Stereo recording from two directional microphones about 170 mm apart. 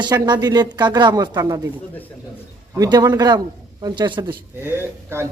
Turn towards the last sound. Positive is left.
turn(degrees=-15)  # may be behind; listen again after turning